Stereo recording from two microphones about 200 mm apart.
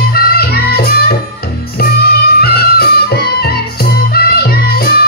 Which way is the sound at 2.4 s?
50° left (ahead or behind).